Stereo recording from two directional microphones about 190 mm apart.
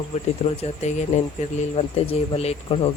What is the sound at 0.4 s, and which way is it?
Speech, 35° left (ahead or behind).